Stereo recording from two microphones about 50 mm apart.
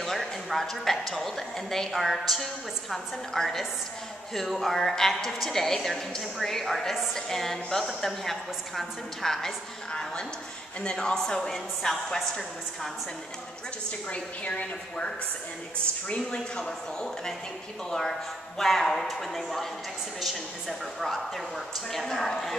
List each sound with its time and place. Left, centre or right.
0.0 s a woman's voice: centre
10.8 s a woman's voice: centre
14.1 s a woman's voice: left
16.5 s a woman's voice: centre